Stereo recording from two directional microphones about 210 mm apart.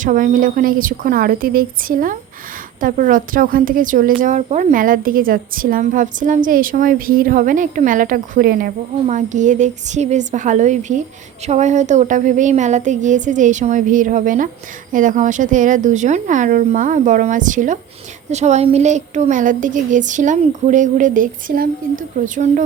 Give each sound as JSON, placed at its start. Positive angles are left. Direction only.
{"t": 0.0, "sound": "a woman's voice", "side_deg": -40}